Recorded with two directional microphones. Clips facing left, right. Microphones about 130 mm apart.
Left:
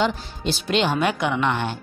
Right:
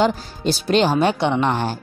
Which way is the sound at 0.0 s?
40° right (ahead or behind).